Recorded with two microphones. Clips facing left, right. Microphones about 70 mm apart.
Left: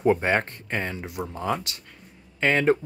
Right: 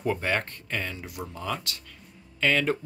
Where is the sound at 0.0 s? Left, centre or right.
Left.